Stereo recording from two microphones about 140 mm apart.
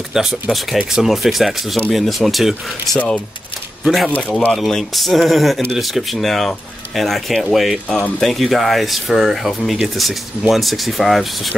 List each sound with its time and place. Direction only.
0.1 s speech: centre (ahead or behind)